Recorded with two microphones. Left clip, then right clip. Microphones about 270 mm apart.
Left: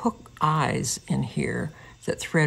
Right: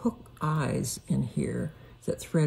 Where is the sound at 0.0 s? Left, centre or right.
Left.